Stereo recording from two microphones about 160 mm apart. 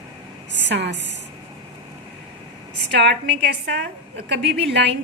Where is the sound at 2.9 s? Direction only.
90° right.